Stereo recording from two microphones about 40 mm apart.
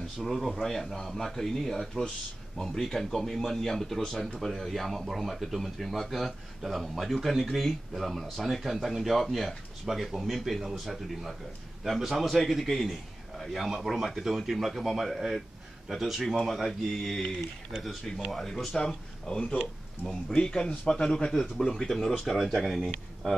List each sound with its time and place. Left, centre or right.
0.2 s speech: centre
18.1 s speech: left; by 22.8 s centre